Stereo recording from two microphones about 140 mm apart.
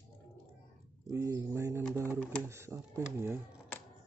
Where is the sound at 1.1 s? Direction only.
25° right (ahead or behind).